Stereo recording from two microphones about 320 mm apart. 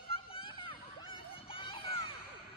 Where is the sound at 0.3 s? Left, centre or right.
Centre.